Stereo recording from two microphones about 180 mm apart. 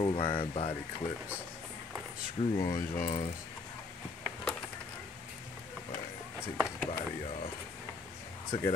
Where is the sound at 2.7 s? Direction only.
45° left (ahead or behind).